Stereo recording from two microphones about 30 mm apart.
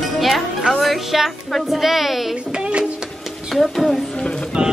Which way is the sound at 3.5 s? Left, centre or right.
Centre.